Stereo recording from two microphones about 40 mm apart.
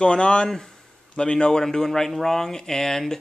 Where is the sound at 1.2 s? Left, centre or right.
Left.